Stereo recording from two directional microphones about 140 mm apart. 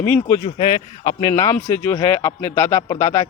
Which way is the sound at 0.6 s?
35° left (ahead or behind).